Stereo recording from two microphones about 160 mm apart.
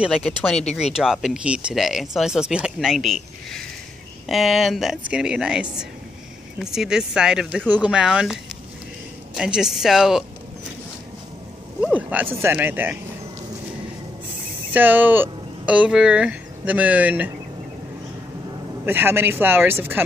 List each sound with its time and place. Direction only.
0.0 s speech: centre (ahead or behind)
11.8 s a sound: 10° right (ahead or behind)
12.4 s speech: 15° right (ahead or behind)
14.7 s speech: 10° right (ahead or behind)
18.9 s speech: 15° right (ahead or behind)